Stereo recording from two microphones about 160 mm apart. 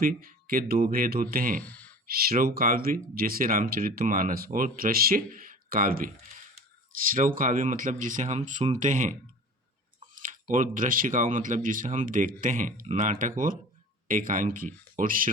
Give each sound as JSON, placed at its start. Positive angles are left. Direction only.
{"t": 0.0, "sound": "speech", "side_deg": -65}
{"t": 1.6, "sound": "a sound", "side_deg": 10}
{"t": 2.0, "sound": "speech", "side_deg": -65}
{"t": 7.1, "sound": "speech", "side_deg": -60}